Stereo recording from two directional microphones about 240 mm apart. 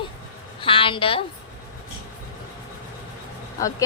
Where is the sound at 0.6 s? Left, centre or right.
Left.